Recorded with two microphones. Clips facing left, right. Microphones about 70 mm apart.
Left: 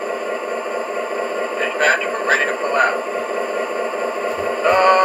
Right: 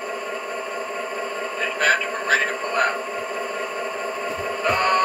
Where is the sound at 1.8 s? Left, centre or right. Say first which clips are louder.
Left 3 dB; left.